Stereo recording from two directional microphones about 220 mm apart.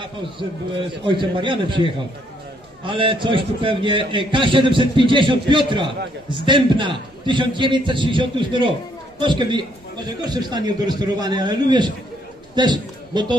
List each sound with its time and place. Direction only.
0.0 s a man's voice: 20° right (ahead or behind)